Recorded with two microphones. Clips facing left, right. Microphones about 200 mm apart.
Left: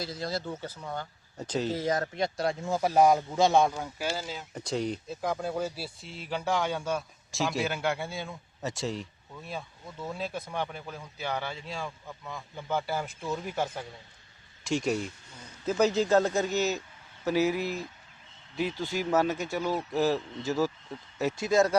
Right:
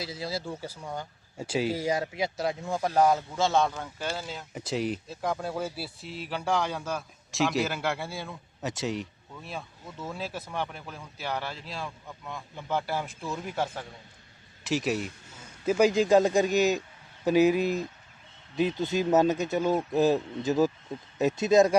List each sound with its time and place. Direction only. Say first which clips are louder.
0.0 s a man's voice: even; 5° right (ahead or behind)